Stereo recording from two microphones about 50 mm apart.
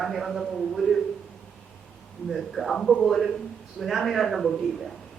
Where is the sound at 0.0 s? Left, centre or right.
Centre.